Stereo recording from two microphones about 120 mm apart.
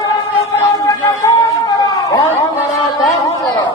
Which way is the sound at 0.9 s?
30° left (ahead or behind).